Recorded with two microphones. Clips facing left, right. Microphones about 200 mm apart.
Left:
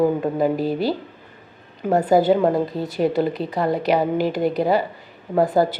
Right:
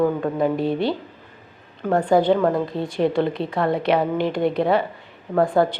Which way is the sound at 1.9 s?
5° left (ahead or behind).